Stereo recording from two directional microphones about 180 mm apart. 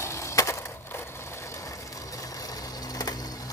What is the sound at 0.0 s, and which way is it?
Skateboard, 15° left (ahead or behind).